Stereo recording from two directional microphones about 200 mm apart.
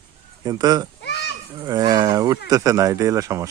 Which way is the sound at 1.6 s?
20° right (ahead or behind).